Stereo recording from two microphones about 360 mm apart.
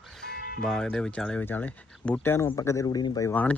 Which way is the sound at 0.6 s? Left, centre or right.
Centre.